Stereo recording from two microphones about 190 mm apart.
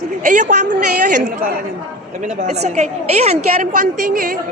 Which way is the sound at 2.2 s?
40° right (ahead or behind).